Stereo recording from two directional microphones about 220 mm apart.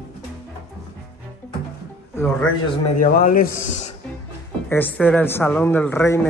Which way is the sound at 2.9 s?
35° left (ahead or behind).